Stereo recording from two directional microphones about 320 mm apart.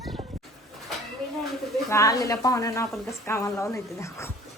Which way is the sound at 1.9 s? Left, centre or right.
Centre.